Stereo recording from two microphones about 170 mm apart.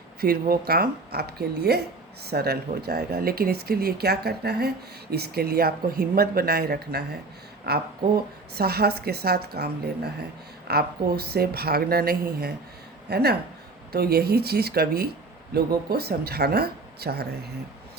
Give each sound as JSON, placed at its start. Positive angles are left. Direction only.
{"t": 0.2, "sound": "speech", "side_deg": -60}